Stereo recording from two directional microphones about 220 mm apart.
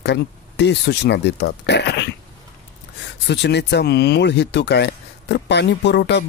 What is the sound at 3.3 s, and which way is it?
Speech, 50° left (ahead or behind).